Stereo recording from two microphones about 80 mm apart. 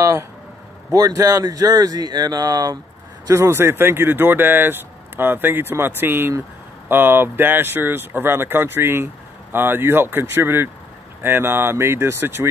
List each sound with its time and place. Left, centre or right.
0.0 s speech: right
0.9 s speech: right
3.3 s speech: right